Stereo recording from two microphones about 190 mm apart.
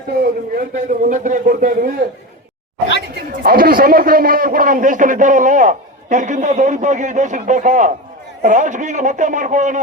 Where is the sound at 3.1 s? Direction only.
50° right (ahead or behind).